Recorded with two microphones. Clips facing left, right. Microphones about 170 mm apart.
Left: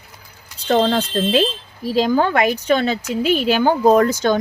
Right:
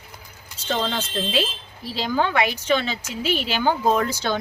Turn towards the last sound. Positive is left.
turn(degrees=45)  # may be behind; listen again after turning